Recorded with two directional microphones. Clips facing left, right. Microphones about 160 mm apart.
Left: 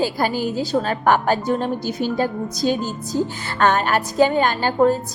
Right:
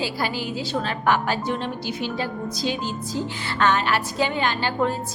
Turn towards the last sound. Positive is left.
turn(degrees=40)  # may be behind; listen again after turning